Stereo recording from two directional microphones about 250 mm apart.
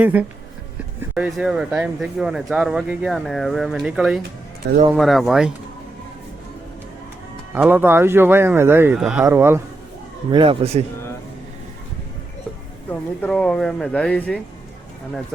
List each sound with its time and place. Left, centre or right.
0.0 s speech: centre
4.6 s speech: right
4.9 s speech: centre
7.5 s speech: centre
10.3 s a man's voice: right
12.9 s speech: centre